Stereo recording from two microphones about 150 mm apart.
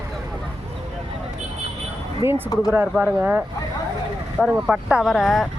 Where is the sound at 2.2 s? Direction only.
15° right (ahead or behind); by 5.5 s centre (ahead or behind).